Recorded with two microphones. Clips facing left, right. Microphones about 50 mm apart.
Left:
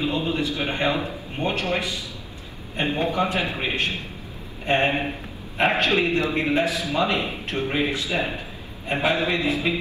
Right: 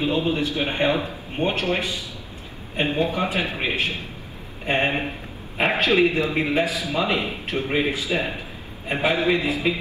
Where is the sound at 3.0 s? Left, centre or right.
Left.